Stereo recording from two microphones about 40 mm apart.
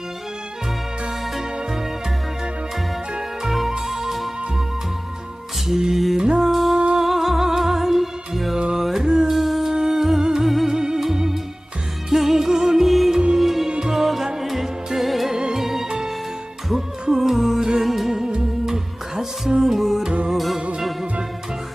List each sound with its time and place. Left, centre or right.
1.2 s music: centre
3.4 s music: centre
5.6 s music: centre
6.5 s music: centre
6.7 s music: right
7.0 s music: centre
8.5 s music: centre
8.8 s music: centre
13.1 s music: centre
13.4 s music: centre
13.7 s music: centre
15.3 s music: centre
15.5 s music: centre